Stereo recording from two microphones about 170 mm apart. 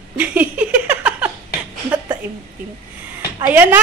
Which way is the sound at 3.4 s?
10° right (ahead or behind).